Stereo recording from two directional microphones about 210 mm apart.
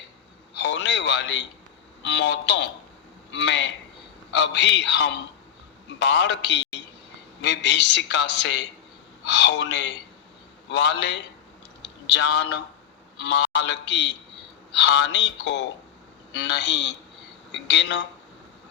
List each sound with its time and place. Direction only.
0.6 s a man's voice: 55° left (ahead or behind)
11.8 s a sound: 55° left (ahead or behind)
13.1 s a man's voice: 55° left (ahead or behind)